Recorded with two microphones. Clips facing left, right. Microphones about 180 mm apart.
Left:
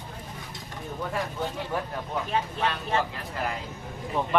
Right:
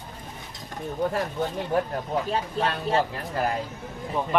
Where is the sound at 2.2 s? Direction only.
35° right (ahead or behind).